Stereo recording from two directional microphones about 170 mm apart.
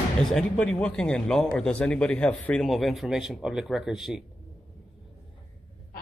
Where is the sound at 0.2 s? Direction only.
5° left (ahead or behind).